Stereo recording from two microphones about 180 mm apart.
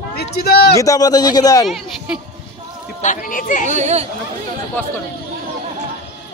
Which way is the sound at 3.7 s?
40° right (ahead or behind).